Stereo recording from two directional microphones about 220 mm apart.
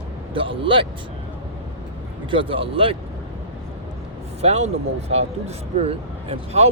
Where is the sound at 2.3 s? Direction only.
25° right (ahead or behind).